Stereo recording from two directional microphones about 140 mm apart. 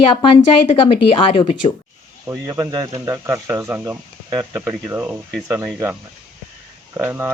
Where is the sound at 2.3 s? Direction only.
15° right (ahead or behind).